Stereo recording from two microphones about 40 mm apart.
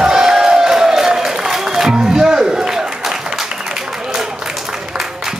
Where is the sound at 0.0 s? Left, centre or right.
Centre.